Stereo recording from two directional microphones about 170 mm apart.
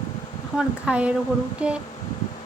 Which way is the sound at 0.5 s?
5° right (ahead or behind).